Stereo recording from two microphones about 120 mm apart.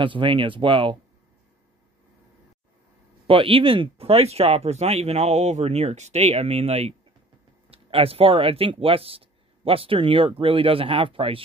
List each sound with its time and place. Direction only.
0.0 s speech: 45° right (ahead or behind)
3.3 s speech: 50° right (ahead or behind)